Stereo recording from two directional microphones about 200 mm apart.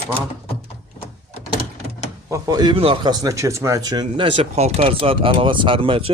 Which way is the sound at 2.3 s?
20° right (ahead or behind).